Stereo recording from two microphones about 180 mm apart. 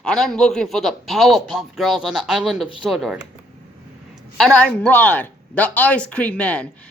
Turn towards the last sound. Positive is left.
turn(degrees=5)  # may be behind; listen again after turning